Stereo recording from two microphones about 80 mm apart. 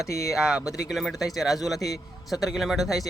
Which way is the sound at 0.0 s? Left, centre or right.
Centre.